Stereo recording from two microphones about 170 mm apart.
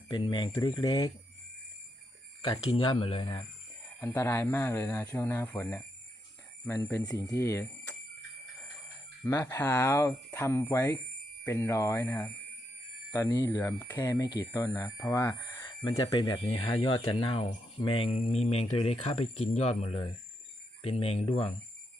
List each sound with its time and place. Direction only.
0.1 s speech: 25° left (ahead or behind)
2.7 s speech: 30° left (ahead or behind)
4.0 s speech: 10° left (ahead or behind)
9.2 s speech: 15° left (ahead or behind)
13.2 s speech: 25° left (ahead or behind)